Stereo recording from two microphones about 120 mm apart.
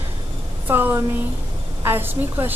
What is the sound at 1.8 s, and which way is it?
Speech, 20° right (ahead or behind).